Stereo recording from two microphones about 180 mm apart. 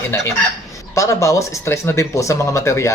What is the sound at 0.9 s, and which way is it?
Speech, 15° left (ahead or behind).